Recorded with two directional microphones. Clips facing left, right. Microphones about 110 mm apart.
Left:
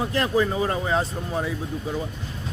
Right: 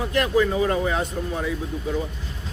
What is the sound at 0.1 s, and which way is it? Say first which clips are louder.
Speech: right 5 dB; 30° left (ahead or behind).